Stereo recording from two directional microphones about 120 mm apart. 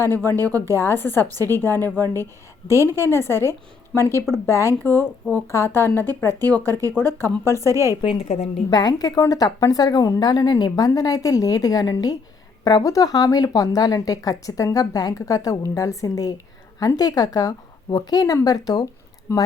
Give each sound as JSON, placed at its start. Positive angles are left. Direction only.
{"t": 0.0, "sound": "speech", "side_deg": 20}
{"t": 7.7, "sound": "speech", "side_deg": -25}
{"t": 8.0, "sound": "a woman's voice", "side_deg": 60}
{"t": 8.7, "sound": "a woman's voice", "side_deg": 35}
{"t": 19.3, "sound": "speech", "side_deg": 25}